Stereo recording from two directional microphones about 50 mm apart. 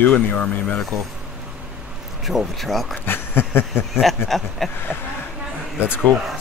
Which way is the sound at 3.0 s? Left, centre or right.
Left.